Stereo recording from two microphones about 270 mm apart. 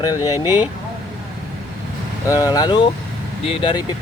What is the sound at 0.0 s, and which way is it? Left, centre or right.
Speech, centre.